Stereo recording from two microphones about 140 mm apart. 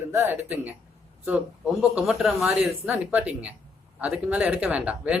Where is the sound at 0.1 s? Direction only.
15° right (ahead or behind).